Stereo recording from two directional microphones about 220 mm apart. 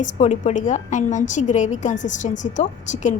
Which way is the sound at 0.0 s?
35° left (ahead or behind).